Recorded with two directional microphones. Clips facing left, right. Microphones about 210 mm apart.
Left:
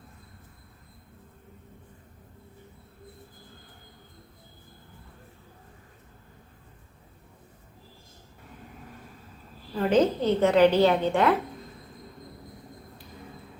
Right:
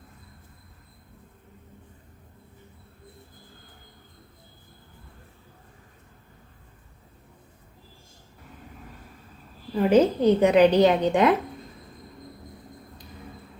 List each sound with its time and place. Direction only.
9.7 s a woman's voice: 10° right (ahead or behind)